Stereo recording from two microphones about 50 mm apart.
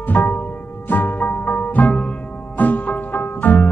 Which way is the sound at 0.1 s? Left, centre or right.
Left.